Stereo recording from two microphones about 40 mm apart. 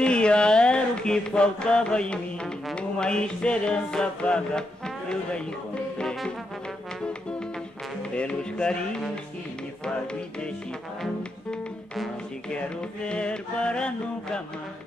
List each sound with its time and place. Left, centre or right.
0.0 s a sound: left
2.7 s music: left
8.1 s music: left
12.4 s music: left